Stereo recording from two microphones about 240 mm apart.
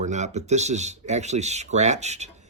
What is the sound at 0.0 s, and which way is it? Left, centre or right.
Speech, right.